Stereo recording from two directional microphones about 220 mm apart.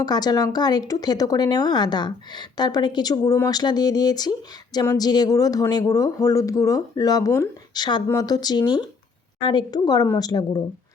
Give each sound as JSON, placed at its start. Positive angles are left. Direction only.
{"t": 0.0, "sound": "a woman's voice", "side_deg": 20}